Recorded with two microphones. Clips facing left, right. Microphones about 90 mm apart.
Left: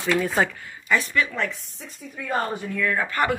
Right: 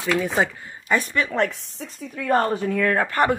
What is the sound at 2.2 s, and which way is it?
Speech, 50° right (ahead or behind).